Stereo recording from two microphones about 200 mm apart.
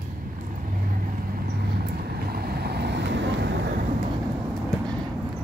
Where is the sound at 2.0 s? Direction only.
50° right (ahead or behind).